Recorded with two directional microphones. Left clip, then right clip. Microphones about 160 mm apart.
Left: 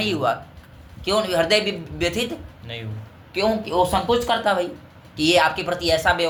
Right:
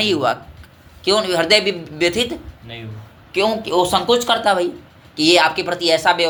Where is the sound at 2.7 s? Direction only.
65° left (ahead or behind).